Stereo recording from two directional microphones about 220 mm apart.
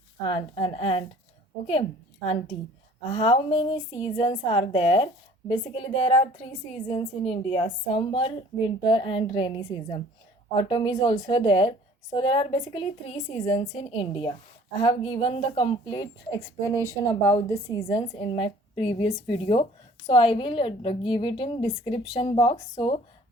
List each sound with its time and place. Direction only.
0.2 s a woman's voice: 20° left (ahead or behind)
2.2 s a woman's voice: 30° left (ahead or behind)